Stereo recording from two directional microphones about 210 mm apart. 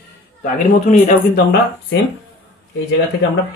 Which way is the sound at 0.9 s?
35° left (ahead or behind).